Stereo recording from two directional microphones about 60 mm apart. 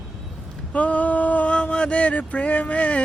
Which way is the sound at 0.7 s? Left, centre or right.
Left.